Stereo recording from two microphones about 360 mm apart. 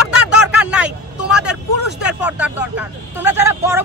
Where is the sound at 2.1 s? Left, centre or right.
Centre.